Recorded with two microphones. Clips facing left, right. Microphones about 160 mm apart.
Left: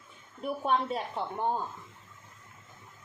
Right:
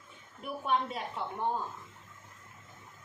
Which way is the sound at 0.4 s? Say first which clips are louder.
Left 3 dB; 35° left (ahead or behind).